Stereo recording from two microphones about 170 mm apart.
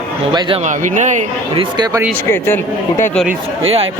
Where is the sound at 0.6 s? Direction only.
45° right (ahead or behind).